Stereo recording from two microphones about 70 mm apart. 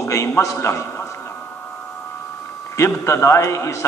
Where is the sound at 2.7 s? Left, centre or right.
Left.